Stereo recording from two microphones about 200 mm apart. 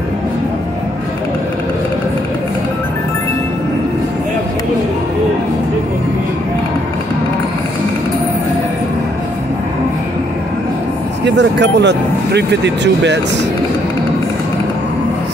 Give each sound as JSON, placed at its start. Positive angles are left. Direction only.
{"t": 11.2, "sound": "speech", "side_deg": -60}